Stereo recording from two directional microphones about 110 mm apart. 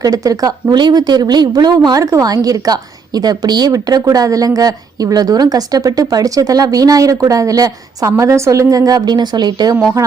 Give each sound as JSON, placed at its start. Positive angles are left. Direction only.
{"t": 0.0, "sound": "a woman's voice", "side_deg": -30}